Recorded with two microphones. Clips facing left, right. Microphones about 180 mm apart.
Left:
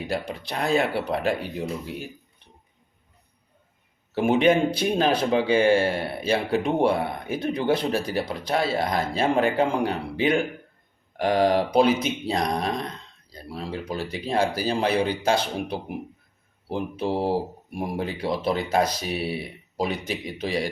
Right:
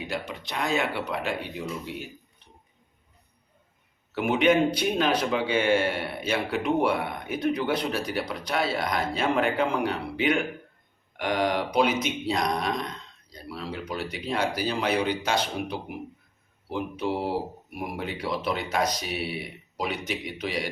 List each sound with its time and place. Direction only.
0.1 s speech: 35° left (ahead or behind)
4.1 s speech: 30° left (ahead or behind)